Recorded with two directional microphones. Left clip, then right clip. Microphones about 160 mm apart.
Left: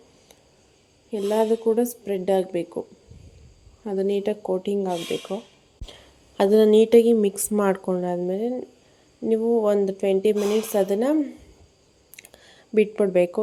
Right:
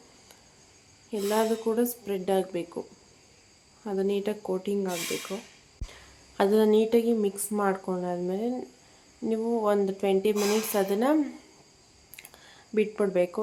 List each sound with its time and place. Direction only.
1.1 s a woman's voice: 15° left (ahead or behind)
3.8 s a woman's voice: 25° left (ahead or behind)
9.3 s speech: 15° left (ahead or behind)
12.1 s a sound: 25° left (ahead or behind)